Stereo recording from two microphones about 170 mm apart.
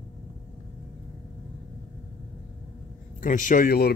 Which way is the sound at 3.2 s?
50° left (ahead or behind).